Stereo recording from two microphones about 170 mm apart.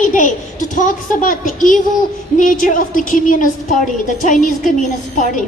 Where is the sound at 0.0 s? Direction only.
50° left (ahead or behind).